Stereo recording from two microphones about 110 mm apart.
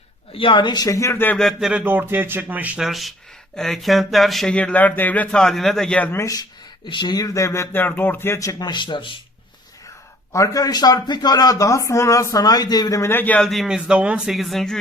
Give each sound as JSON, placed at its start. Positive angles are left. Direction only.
{"t": 0.3, "sound": "speech", "side_deg": 50}
{"t": 0.9, "sound": "speech", "side_deg": 25}
{"t": 1.4, "sound": "speech", "side_deg": 0}
{"t": 1.7, "sound": "speech", "side_deg": -15}
{"t": 2.8, "sound": "speech", "side_deg": 0}
{"t": 6.1, "sound": "speech", "side_deg": 30}
{"t": 6.8, "sound": "speech", "side_deg": 45}
{"t": 10.3, "sound": "speech", "side_deg": 30}
{"t": 13.4, "sound": "speech", "side_deg": 0}